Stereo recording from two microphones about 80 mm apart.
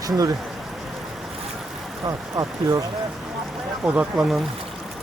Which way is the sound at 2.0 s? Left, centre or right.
Right.